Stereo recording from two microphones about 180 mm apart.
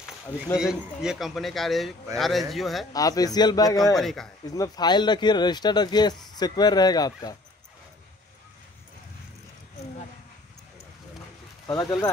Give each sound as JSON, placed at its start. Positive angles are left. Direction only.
{"t": 0.6, "sound": "a man's voice", "side_deg": -5}
{"t": 2.9, "sound": "speech", "side_deg": 20}
{"t": 4.0, "sound": "a man's voice", "side_deg": 0}
{"t": 4.5, "sound": "speech", "side_deg": 20}
{"t": 11.6, "sound": "speech", "side_deg": 20}